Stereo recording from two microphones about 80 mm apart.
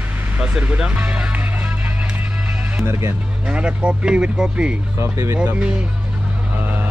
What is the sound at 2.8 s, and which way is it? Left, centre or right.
Speech, right.